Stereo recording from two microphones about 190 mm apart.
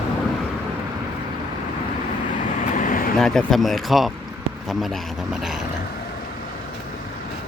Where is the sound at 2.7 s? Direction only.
45° left (ahead or behind).